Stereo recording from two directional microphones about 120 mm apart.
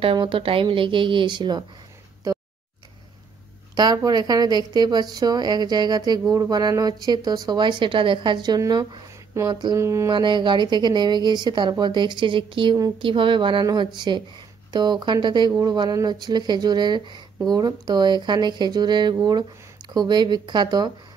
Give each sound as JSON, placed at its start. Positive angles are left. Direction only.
{"t": 0.0, "sound": "speech", "side_deg": -45}
{"t": 3.7, "sound": "speech", "side_deg": -35}
{"t": 9.8, "sound": "mantra", "side_deg": -25}
{"t": 10.1, "sound": "speech", "side_deg": -40}